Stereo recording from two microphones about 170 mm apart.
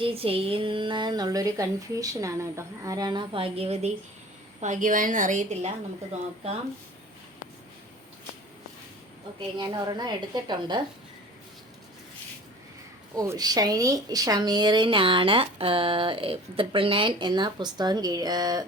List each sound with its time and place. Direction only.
0.0 s a woman's voice: 35° right (ahead or behind)
4.6 s a woman's voice: 45° right (ahead or behind)
9.6 s a woman's voice: 25° right (ahead or behind)
13.1 s a woman's voice: 20° right (ahead or behind)